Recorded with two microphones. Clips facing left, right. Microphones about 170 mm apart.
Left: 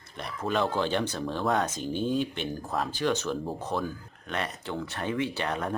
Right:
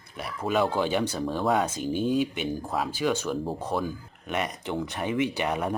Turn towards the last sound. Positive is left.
turn(degrees=-15)  # may be behind; listen again after turning